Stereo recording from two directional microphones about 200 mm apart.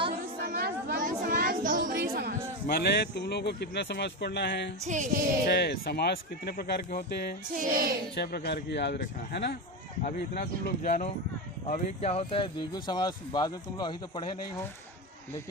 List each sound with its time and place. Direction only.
0.4 s a sound: 50° right (ahead or behind)
2.6 s speech: 50° left (ahead or behind)
4.9 s music: 40° right (ahead or behind)
5.5 s speech: 55° left (ahead or behind)
7.5 s child singing: 45° right (ahead or behind)
8.1 s speech: 55° left (ahead or behind)
10.0 s speech: 45° left (ahead or behind); by 14.3 s 25° left (ahead or behind)